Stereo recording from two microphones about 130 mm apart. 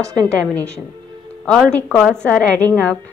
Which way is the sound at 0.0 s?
25° right (ahead or behind).